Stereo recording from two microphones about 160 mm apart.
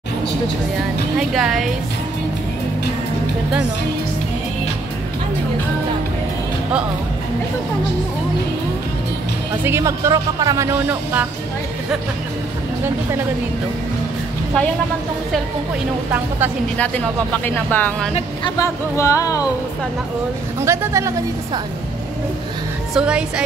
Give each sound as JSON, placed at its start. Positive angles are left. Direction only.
{"t": 1.3, "sound": "speech", "side_deg": 0}
{"t": 9.7, "sound": "speech", "side_deg": -15}
{"t": 16.7, "sound": "speech", "side_deg": 10}
{"t": 20.6, "sound": "speech", "side_deg": -15}
{"t": 22.9, "sound": "speech", "side_deg": -5}